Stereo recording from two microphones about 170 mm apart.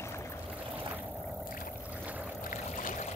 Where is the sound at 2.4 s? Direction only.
50° left (ahead or behind).